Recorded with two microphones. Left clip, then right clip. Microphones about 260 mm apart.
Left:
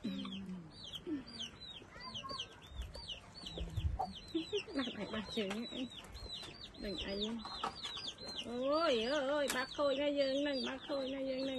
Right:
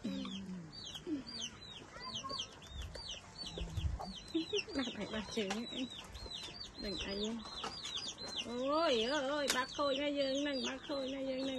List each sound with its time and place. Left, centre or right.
0.0 s chicken: centre
4.3 s chicken: centre
6.8 s speech: centre
7.4 s chicken: centre
8.3 s speech: centre